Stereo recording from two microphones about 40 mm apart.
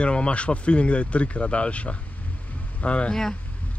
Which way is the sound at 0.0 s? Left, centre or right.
Left.